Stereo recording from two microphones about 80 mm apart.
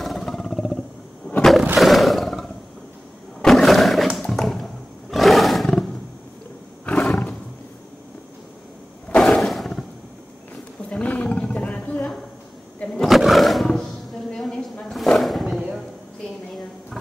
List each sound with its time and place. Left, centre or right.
0.0 s wild animals: centre
1.8 s roar: centre
3.4 s wild animals: centre
5.1 s roar: centre
6.9 s roar: centre
9.1 s a sound: centre
9.4 s a sound: centre
10.9 s roaring cats: centre
13.1 s roaring cats: centre